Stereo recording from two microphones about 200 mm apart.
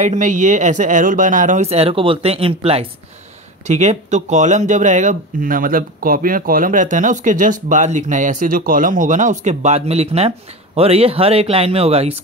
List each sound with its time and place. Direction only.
0.0 s speech: 40° right (ahead or behind)